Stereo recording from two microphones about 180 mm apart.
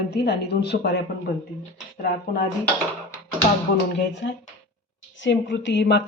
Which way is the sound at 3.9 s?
75° left (ahead or behind).